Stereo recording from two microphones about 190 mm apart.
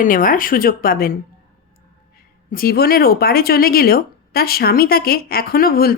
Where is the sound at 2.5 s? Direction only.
50° left (ahead or behind).